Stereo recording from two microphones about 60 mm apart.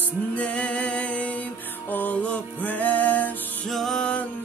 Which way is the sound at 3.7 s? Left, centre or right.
Centre.